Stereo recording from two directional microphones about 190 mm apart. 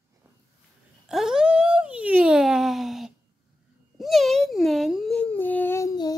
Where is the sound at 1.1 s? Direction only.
5° right (ahead or behind).